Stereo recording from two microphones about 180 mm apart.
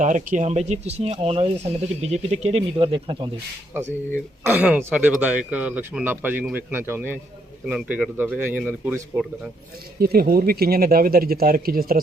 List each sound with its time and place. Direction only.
0.0 s speech: 45° right (ahead or behind); by 3.2 s 25° right (ahead or behind)
4.4 s speech: 10° right (ahead or behind)
10.0 s speech: 55° right (ahead or behind)